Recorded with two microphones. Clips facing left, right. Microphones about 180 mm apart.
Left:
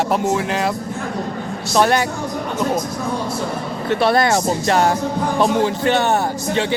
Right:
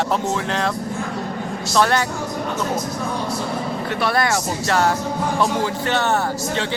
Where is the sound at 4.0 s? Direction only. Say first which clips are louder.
Left 5 dB; 25° left (ahead or behind).